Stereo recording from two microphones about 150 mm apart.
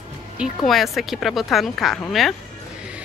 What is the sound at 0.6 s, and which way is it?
Speech, centre (ahead or behind).